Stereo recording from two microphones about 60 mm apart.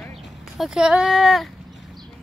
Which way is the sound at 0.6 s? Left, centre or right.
Centre.